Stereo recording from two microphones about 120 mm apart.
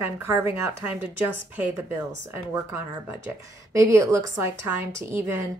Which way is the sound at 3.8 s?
25° right (ahead or behind).